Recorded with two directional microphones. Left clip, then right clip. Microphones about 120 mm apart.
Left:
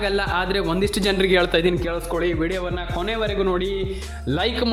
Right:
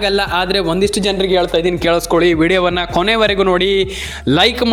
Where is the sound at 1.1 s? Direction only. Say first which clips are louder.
Right 4 dB; 10° right (ahead or behind).